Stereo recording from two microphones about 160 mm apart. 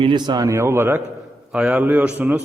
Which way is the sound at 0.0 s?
30° right (ahead or behind).